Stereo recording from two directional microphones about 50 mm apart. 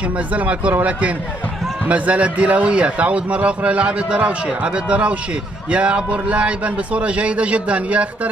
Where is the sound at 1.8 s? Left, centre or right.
Right.